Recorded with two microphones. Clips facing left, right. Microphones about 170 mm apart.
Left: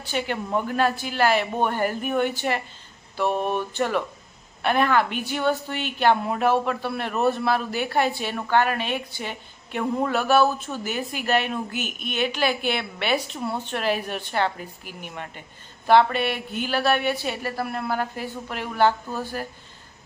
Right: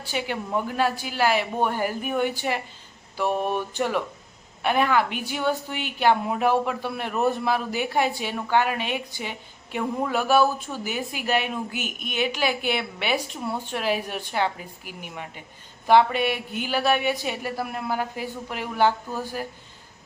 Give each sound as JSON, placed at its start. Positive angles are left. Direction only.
{"t": 0.0, "sound": "speech", "side_deg": -10}